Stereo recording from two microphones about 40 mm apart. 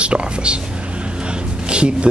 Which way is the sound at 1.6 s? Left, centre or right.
Right.